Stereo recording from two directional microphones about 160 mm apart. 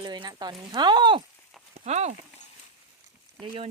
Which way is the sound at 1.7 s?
45° right (ahead or behind).